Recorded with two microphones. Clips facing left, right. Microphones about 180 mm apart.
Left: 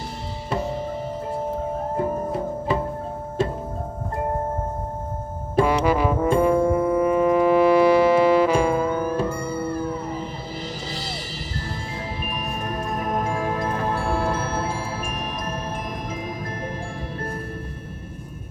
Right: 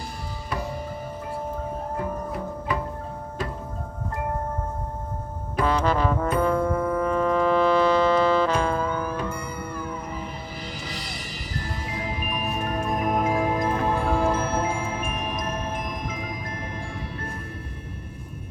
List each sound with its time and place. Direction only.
2.0 s music: 30° left (ahead or behind)
5.6 s brass instrument: 10° left (ahead or behind)
6.4 s music: 15° left (ahead or behind)
9.1 s music: 30° left (ahead or behind)
13.1 s music: 5° right (ahead or behind)
14.8 s music: 35° left (ahead or behind)